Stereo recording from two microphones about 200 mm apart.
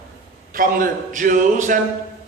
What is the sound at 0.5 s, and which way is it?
Speech, 45° right (ahead or behind).